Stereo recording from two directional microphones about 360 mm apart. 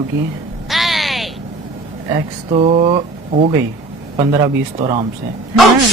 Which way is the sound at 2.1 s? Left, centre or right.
Centre.